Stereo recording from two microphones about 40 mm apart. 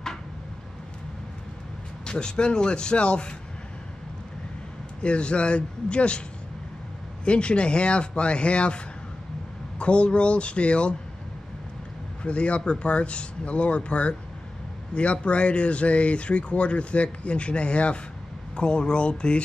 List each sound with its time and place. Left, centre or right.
2.0 s speech: left
5.0 s speech: left
7.2 s speech: left
12.2 s speech: left